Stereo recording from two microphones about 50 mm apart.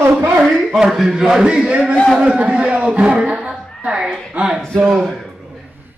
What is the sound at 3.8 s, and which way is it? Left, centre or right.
Speech, centre.